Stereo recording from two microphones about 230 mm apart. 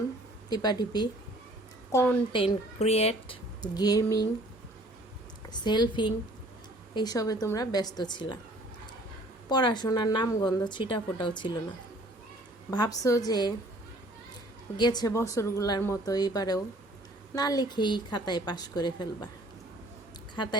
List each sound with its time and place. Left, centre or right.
0.5 s a woman's voice: centre
2.4 s a woman's voice: left
5.5 s a woman's voice: centre
9.5 s a woman's voice: centre
12.7 s a woman's voice: centre
14.8 s a woman's voice: centre
20.3 s a woman's voice: centre